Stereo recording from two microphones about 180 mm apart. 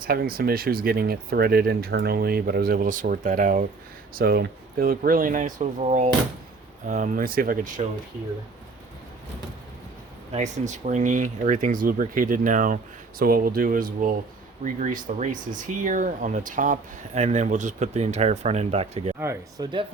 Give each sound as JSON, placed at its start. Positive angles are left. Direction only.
{"t": 0.0, "sound": "speech", "side_deg": -55}
{"t": 4.1, "sound": "speech", "side_deg": -55}
{"t": 10.3, "sound": "speech", "side_deg": -40}
{"t": 19.2, "sound": "speech", "side_deg": -15}